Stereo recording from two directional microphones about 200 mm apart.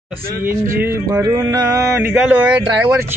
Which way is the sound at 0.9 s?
15° right (ahead or behind).